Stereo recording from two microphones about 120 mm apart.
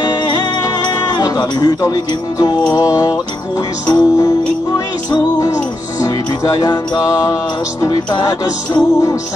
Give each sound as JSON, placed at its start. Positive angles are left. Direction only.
{"t": 0.8, "sound": "music", "side_deg": 35}